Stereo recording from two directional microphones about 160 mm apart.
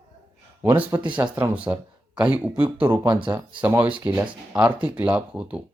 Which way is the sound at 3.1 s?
30° right (ahead or behind).